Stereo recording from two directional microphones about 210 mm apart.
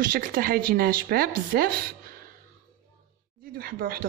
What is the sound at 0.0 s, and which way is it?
Speech, 40° right (ahead or behind).